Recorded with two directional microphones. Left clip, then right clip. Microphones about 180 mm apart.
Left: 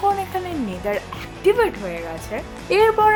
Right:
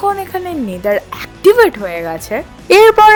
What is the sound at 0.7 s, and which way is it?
Speech, 35° right (ahead or behind).